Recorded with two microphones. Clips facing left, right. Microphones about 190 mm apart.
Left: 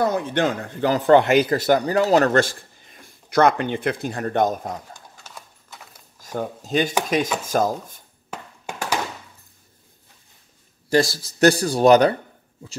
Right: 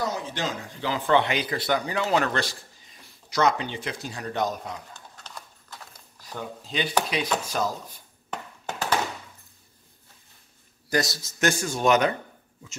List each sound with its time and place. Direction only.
0.0 s speech: 55° left (ahead or behind)
4.9 s clip-clop: 10° left (ahead or behind)
6.2 s speech: 45° left (ahead or behind)
8.3 s a sound: 10° left (ahead or behind)
10.9 s a man's voice: 30° left (ahead or behind)